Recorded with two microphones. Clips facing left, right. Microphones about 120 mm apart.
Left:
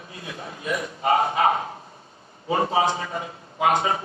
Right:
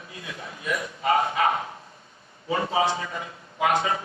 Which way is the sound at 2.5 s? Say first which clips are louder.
Left 2 dB; 35° left (ahead or behind).